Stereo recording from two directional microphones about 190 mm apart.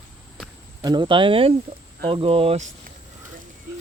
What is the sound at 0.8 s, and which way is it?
Speech, 25° right (ahead or behind).